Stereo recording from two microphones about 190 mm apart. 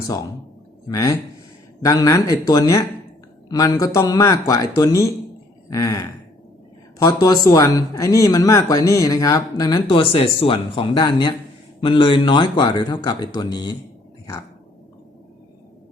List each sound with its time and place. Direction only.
0.9 s speech: 20° left (ahead or behind)